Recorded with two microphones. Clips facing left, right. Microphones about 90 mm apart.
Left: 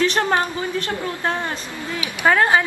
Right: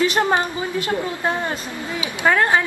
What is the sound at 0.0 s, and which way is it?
A woman's voice, 10° right (ahead or behind).